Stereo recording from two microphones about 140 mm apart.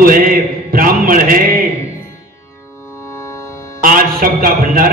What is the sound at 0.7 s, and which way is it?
Mantra, 90° right.